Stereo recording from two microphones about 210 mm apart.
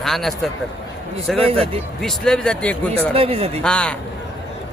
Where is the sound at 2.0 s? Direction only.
5° left (ahead or behind).